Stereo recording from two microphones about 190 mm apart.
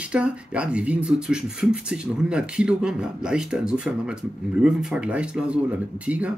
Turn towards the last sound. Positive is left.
turn(degrees=-5)  # may be behind; listen again after turning